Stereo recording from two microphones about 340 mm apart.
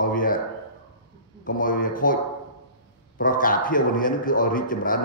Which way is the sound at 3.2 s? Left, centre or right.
Left.